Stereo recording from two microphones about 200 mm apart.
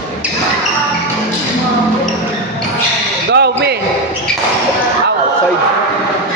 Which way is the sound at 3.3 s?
55° right (ahead or behind).